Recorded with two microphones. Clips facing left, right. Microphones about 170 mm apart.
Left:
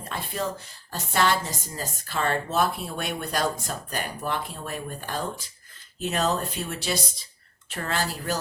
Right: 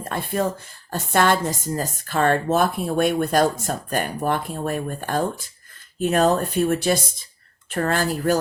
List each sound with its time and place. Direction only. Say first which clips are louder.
0.0 s a woman's voice: right 7 dB; 50° right (ahead or behind)